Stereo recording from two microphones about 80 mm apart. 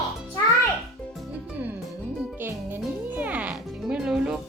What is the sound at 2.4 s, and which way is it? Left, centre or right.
Music, right.